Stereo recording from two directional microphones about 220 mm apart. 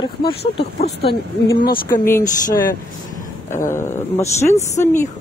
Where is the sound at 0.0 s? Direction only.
25° left (ahead or behind).